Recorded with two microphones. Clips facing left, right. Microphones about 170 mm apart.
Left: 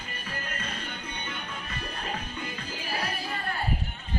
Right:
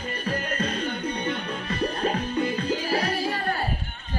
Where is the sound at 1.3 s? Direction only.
70° right (ahead or behind).